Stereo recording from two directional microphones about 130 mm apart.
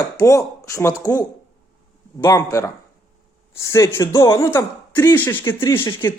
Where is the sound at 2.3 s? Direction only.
25° left (ahead or behind).